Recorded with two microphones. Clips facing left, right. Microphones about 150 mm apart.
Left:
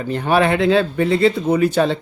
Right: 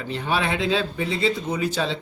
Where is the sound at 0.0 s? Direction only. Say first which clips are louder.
Left 8 dB; 50° left (ahead or behind).